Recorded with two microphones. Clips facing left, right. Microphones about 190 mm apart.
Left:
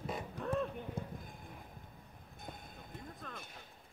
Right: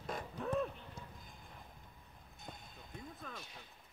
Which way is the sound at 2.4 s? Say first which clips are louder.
Left 3 dB; 55° left (ahead or behind).